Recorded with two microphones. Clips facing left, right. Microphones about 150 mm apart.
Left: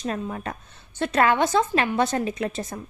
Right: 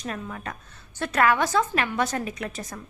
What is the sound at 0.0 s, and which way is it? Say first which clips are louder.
A woman's voice: left 5 dB; 30° left (ahead or behind).